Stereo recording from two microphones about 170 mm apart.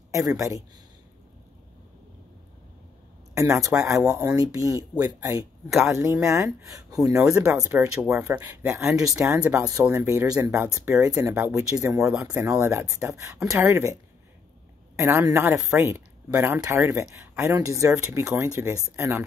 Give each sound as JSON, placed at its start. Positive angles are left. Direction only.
{"t": 0.1, "sound": "speech", "side_deg": -20}
{"t": 3.3, "sound": "speech", "side_deg": -20}
{"t": 15.0, "sound": "speech", "side_deg": -15}